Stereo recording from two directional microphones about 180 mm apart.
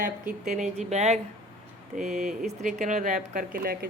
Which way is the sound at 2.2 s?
Centre (ahead or behind).